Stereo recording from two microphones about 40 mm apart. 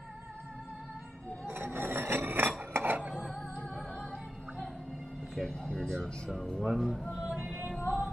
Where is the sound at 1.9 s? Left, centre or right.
Right.